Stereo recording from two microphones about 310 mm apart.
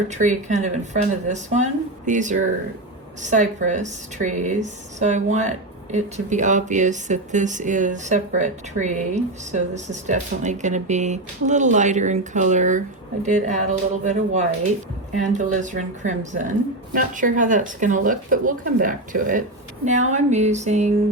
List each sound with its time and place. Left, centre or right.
0.1 s speech: right